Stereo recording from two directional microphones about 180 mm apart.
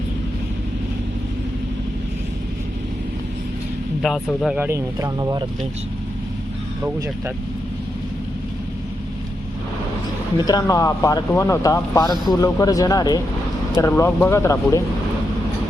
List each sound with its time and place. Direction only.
4.0 s speech: centre (ahead or behind); by 5.5 s 20° right (ahead or behind)
10.3 s speech: 20° left (ahead or behind)